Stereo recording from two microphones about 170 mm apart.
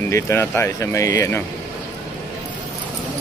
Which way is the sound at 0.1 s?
15° left (ahead or behind).